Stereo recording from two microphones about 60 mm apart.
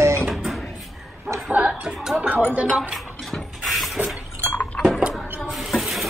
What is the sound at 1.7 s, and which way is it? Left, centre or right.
Music, centre.